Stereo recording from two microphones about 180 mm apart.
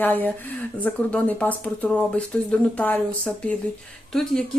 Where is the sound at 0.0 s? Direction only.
10° left (ahead or behind).